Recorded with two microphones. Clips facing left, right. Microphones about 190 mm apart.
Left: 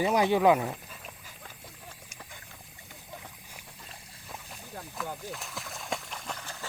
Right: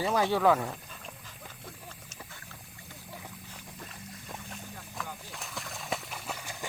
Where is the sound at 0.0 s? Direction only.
15° left (ahead or behind).